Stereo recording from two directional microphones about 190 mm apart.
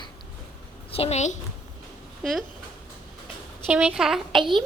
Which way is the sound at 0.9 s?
35° left (ahead or behind).